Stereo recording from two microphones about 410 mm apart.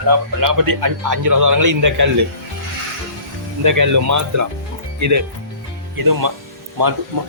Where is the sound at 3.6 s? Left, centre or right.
Right.